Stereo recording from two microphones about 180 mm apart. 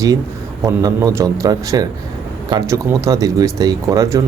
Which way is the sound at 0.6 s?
20° right (ahead or behind).